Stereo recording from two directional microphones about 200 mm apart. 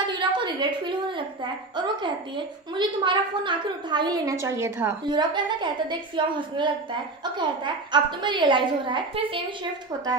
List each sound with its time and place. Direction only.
0.0 s a woman's voice: 25° right (ahead or behind)